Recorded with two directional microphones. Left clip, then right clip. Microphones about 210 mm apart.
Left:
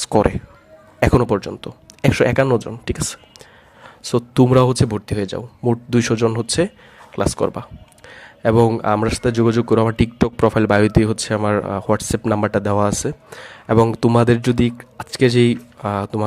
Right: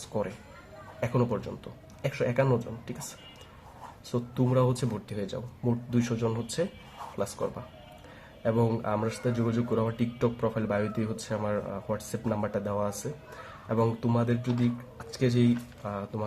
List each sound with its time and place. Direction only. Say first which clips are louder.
0.1 s speech: left 17 dB; 55° left (ahead or behind)
8.0 s speech: left 12 dB; 45° left (ahead or behind)